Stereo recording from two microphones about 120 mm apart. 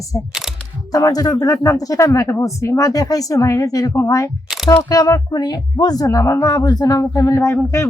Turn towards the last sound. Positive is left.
turn(degrees=20)  # may be behind; listen again after turning